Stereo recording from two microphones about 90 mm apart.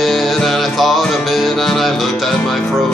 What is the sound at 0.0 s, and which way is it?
Music, centre (ahead or behind).